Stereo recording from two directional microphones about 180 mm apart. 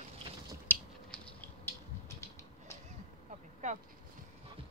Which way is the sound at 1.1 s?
10° left (ahead or behind).